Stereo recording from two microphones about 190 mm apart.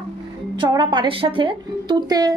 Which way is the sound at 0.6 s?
25° right (ahead or behind).